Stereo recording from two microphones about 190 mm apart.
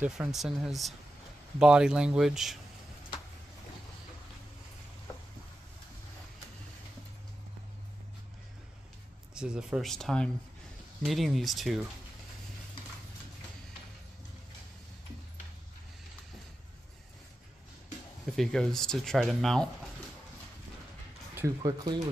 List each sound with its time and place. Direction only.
0.0 s speech: 5° right (ahead or behind)
9.3 s speech: 5° right (ahead or behind)
18.3 s speech: centre (ahead or behind)
21.4 s speech: 20° right (ahead or behind)